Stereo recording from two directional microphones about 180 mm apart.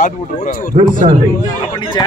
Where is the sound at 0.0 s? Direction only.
50° left (ahead or behind).